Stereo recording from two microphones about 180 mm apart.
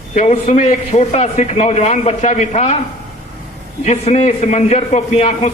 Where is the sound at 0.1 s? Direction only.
40° left (ahead or behind).